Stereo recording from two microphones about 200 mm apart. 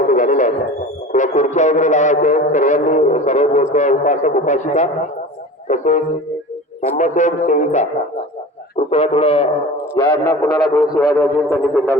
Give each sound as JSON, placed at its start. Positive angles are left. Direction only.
{"t": 0.1, "sound": "didgeridoo", "side_deg": 40}
{"t": 1.1, "sound": "music", "side_deg": 35}
{"t": 5.6, "sound": "speech", "side_deg": 35}
{"t": 6.8, "sound": "music", "side_deg": 35}
{"t": 8.9, "sound": "music", "side_deg": 30}
{"t": 9.9, "sound": "a sound", "side_deg": 10}
{"t": 11.2, "sound": "a sound", "side_deg": 15}